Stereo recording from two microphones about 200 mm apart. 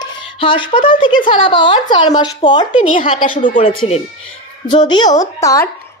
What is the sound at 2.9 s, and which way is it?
Speech, 40° left (ahead or behind).